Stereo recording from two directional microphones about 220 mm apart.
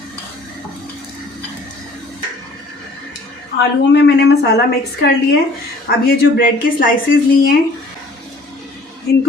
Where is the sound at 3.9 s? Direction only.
50° left (ahead or behind).